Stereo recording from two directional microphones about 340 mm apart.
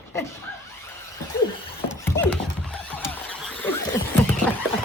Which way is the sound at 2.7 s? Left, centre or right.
Centre.